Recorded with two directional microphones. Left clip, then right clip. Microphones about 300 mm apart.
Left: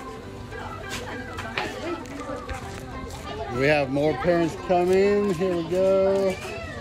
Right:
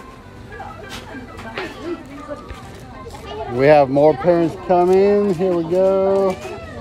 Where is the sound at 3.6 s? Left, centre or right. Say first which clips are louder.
Right 10 dB; right.